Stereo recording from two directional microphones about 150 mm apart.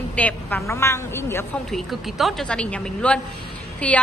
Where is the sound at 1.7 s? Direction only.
Centre (ahead or behind).